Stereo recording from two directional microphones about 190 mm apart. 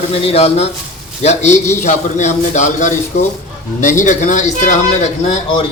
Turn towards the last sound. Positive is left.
turn(degrees=35)  # may be behind; listen again after turning